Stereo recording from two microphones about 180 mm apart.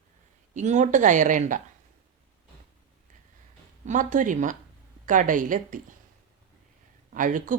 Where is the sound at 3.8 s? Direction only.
45° right (ahead or behind).